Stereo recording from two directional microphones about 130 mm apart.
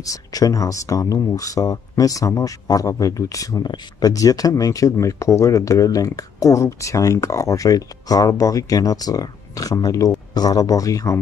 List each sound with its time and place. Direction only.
0.0 s speech: 25° left (ahead or behind)